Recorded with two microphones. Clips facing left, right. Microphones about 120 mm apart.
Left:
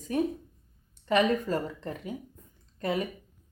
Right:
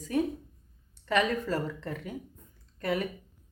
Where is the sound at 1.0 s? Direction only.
20° left (ahead or behind).